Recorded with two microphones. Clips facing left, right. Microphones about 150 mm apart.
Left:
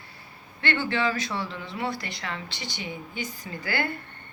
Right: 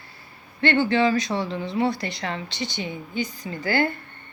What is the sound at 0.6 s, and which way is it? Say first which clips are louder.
Speech: right 7 dB; 25° right (ahead or behind).